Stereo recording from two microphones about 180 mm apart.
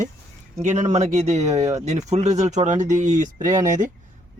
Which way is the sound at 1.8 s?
40° right (ahead or behind).